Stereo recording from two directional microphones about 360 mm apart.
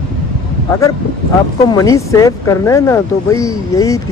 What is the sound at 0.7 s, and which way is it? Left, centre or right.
Speech, centre.